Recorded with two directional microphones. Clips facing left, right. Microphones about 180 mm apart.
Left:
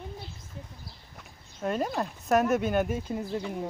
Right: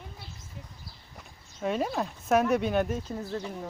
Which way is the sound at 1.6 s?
Centre (ahead or behind).